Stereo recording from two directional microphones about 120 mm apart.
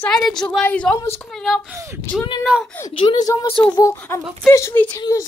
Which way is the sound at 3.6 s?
20° left (ahead or behind).